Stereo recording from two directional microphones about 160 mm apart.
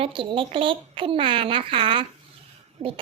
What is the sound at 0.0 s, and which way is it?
Speech, 30° right (ahead or behind).